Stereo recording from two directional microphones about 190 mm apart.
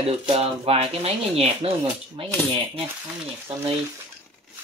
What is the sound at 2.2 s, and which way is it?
Cutlery, 30° right (ahead or behind).